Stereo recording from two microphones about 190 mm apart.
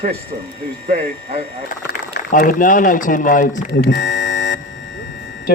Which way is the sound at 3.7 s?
65° left (ahead or behind).